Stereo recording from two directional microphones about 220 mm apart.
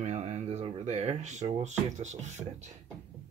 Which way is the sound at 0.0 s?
30° right (ahead or behind).